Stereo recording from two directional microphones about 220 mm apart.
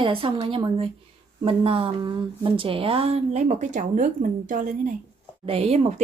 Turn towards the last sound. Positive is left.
turn(degrees=-30)  # may be behind; listen again after turning